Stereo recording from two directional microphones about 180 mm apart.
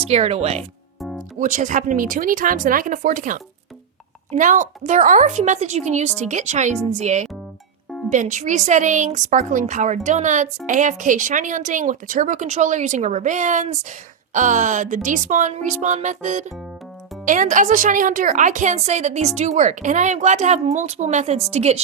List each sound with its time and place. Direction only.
0.1 s a woman's voice: 35° right (ahead or behind)